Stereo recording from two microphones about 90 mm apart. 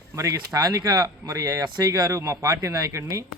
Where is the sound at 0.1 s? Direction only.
35° right (ahead or behind).